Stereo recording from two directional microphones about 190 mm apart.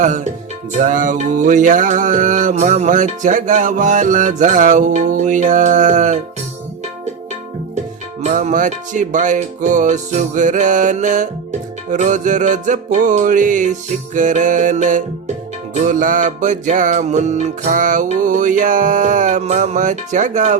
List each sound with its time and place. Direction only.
0.7 s music: 40° right (ahead or behind)
8.2 s music: 40° right (ahead or behind)